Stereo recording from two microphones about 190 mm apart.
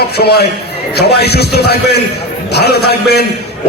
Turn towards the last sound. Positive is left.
turn(degrees=55)  # may be behind; listen again after turning